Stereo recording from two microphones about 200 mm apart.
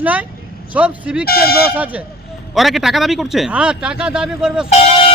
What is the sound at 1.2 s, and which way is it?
Speech, 50° left (ahead or behind).